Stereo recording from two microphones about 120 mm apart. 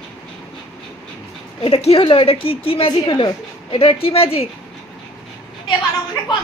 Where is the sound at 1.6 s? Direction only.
55° left (ahead or behind).